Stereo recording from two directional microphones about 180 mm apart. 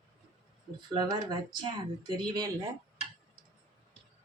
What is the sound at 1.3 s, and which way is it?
Speech, 25° right (ahead or behind).